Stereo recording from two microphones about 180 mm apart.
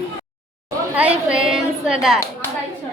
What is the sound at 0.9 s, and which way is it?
A woman's voice, 5° right (ahead or behind).